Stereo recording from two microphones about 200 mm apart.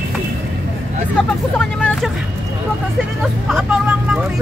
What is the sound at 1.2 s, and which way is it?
Speech, 5° left (ahead or behind).